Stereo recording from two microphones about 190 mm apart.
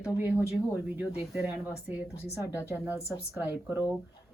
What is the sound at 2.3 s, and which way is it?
Speech, 10° right (ahead or behind).